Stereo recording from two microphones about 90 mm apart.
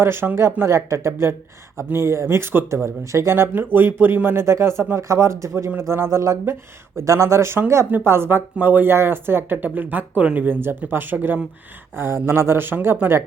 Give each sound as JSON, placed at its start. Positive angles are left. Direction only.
{"t": 0.0, "sound": "speech", "side_deg": -25}